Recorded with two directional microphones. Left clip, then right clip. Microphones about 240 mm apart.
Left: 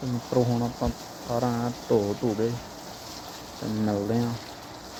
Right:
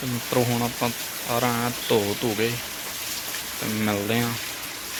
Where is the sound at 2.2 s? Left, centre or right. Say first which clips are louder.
Right 1 dB; right.